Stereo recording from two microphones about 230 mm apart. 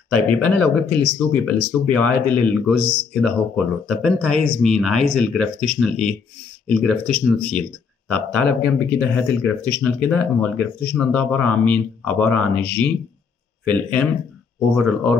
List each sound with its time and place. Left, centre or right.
0.1 s speech: centre